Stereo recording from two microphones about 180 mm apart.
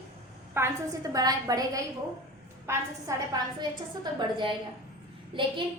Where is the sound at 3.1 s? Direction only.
20° right (ahead or behind).